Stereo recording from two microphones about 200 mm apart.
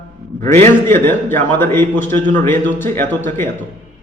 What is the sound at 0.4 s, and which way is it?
Speech, 35° right (ahead or behind).